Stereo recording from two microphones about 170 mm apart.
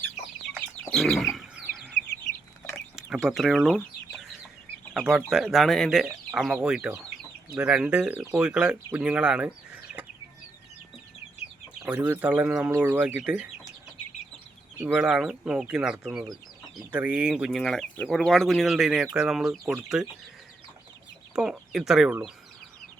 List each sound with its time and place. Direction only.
0.9 s bird: centre (ahead or behind)
2.9 s chicken: 5° right (ahead or behind)
4.9 s speech: centre (ahead or behind)
11.8 s speech: 5° right (ahead or behind)
14.8 s speech: 10° right (ahead or behind)
21.3 s speech: 5° right (ahead or behind)